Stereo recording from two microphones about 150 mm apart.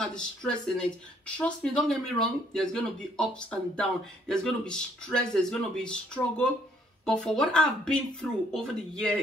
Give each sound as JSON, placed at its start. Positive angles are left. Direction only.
{"t": 0.0, "sound": "speech", "side_deg": 5}